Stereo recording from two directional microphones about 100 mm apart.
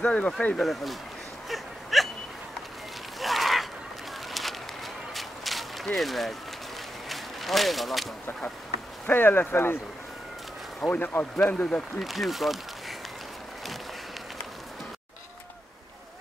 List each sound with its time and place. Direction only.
0.0 s speech: 15° left (ahead or behind)
0.6 s speech: centre (ahead or behind)
1.5 s whimper: centre (ahead or behind)
3.2 s a sound: centre (ahead or behind)
9.0 s speech: 20° left (ahead or behind)
10.8 s speech: 20° left (ahead or behind)
12.0 s speech: centre (ahead or behind)